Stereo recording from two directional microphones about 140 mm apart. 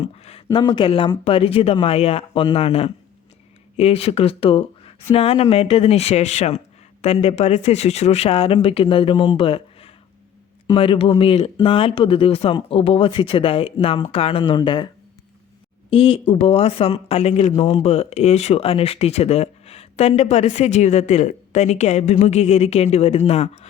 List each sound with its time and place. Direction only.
0.0 s a sound: 45° left (ahead or behind)
0.5 s speech: 35° left (ahead or behind)
15.9 s speech: 40° left (ahead or behind)